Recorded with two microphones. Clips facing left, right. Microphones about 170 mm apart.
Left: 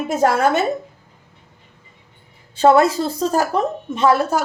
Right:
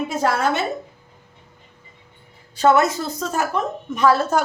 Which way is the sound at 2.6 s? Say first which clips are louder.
Left 3 dB; 30° left (ahead or behind).